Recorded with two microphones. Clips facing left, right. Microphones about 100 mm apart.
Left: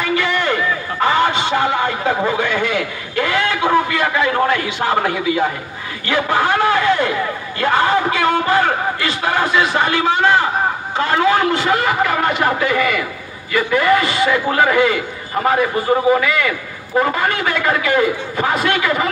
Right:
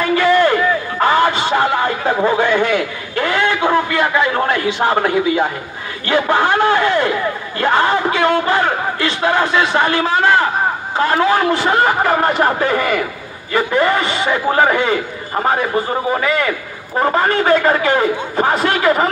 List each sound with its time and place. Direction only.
0.0 s run: 40° right (ahead or behind)
1.0 s a man's voice: 40° right (ahead or behind)
11.1 s a man's voice: 35° right (ahead or behind)
16.2 s a man's voice: 35° right (ahead or behind)